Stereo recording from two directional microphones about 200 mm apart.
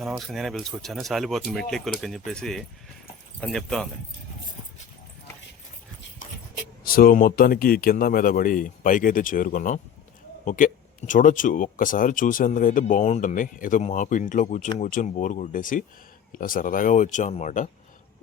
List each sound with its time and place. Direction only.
0.0 s speech: centre (ahead or behind)
6.8 s speech: 45° left (ahead or behind)